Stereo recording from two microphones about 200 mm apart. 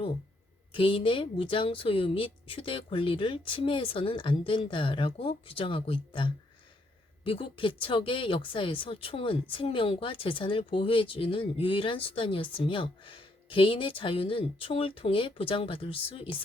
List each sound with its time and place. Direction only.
0.7 s speech: 25° left (ahead or behind)